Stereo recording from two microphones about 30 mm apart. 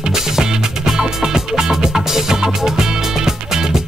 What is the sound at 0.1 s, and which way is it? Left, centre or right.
Music, centre.